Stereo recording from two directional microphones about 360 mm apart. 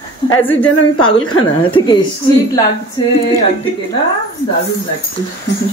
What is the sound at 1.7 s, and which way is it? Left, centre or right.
Speech, centre.